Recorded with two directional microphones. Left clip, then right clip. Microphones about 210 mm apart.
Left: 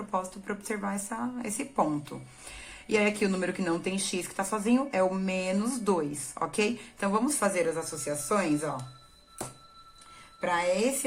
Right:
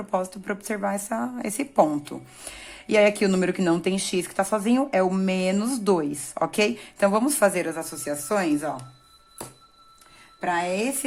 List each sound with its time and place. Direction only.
0.1 s speech: 40° right (ahead or behind)
10.4 s a woman's voice: 40° right (ahead or behind)